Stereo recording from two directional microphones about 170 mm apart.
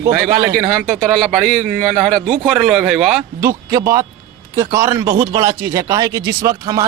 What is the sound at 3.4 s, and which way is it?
Speech, 15° right (ahead or behind).